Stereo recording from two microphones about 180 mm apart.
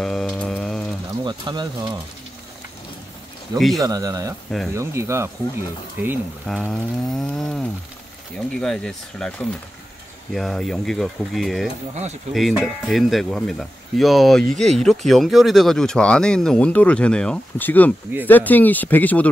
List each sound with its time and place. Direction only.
0.0 s a sound: 5° left (ahead or behind)
1.2 s speech: 25° right (ahead or behind)
3.5 s speech: centre (ahead or behind)
3.8 s speech: 20° right (ahead or behind)
6.4 s speech: centre (ahead or behind)
11.9 s speech: 40° right (ahead or behind)
12.4 s speech: centre (ahead or behind)